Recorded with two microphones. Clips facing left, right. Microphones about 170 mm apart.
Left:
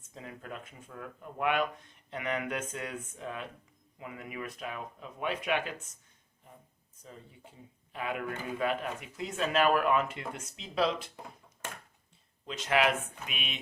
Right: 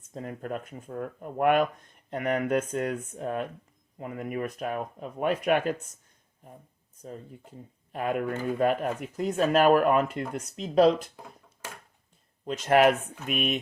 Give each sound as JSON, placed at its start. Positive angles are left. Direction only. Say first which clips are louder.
{"t": 0.1, "sound": "speech", "louder": "right 9 dB", "side_deg": -45}
{"t": 7.0, "sound": "speech", "louder": "right 9 dB", "side_deg": -45}
{"t": 12.5, "sound": "speech", "louder": "right 7 dB", "side_deg": -45}